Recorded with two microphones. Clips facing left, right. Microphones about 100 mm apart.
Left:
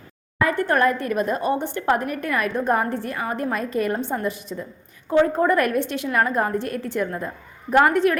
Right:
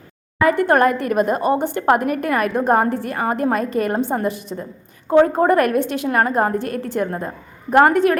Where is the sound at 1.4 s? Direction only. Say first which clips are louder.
Right 5 dB; 5° right (ahead or behind).